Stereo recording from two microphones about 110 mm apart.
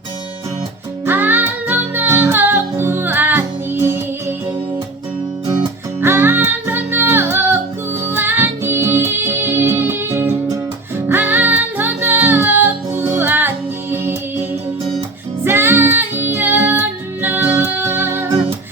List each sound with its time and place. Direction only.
1.0 s music: 20° right (ahead or behind)
6.0 s music: 20° right (ahead or behind)
15.4 s music: 20° right (ahead or behind)